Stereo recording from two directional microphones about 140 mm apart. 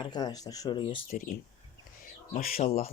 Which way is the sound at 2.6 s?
50° left (ahead or behind).